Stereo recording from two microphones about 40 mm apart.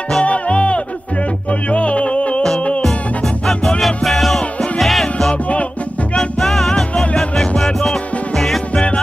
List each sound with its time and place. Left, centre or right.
0.2 s music: left
3.8 s music: centre
5.3 s music: left
6.4 s music: centre
8.7 s music: left